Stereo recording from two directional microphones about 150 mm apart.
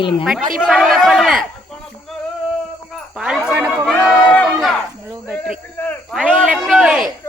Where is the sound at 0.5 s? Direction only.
Centre (ahead or behind).